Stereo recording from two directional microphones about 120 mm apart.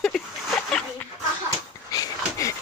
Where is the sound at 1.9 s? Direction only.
30° left (ahead or behind).